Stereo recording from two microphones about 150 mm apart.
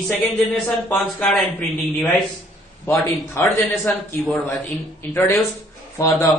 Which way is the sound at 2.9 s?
15° left (ahead or behind).